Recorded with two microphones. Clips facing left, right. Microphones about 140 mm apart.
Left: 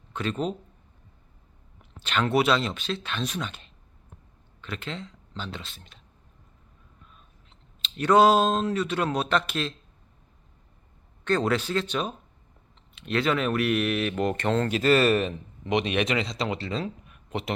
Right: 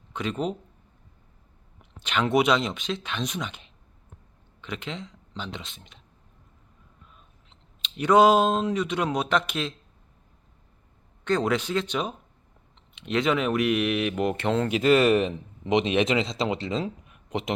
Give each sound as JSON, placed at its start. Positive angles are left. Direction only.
{"t": 0.1, "sound": "speech", "side_deg": -15}
{"t": 1.8, "sound": "speech", "side_deg": -15}
{"t": 7.8, "sound": "speech", "side_deg": -15}
{"t": 11.3, "sound": "speech", "side_deg": -15}